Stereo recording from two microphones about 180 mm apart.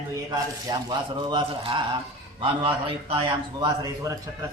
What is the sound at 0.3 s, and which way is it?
A man's voice, 25° right (ahead or behind).